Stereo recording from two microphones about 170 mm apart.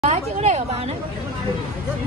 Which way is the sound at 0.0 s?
40° right (ahead or behind).